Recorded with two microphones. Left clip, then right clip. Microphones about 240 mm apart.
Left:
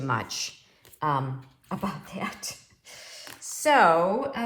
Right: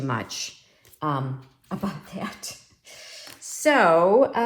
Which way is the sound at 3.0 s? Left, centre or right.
Left.